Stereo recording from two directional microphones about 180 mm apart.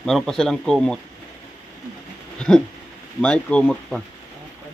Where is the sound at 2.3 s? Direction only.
5° left (ahead or behind).